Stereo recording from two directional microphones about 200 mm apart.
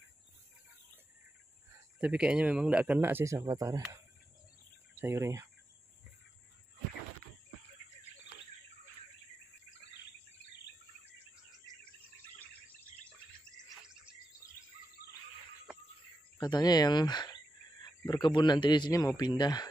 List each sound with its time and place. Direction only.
1.7 s speech: 5° right (ahead or behind)
4.9 s speech: 15° right (ahead or behind)
16.3 s speech: 20° left (ahead or behind)